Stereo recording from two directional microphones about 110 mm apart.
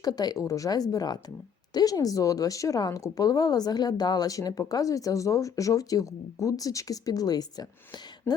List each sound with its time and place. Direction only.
0.0 s a woman's voice: 35° left (ahead or behind)